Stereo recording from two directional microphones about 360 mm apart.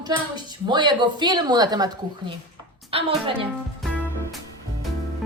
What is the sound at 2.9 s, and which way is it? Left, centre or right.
Female singing, centre.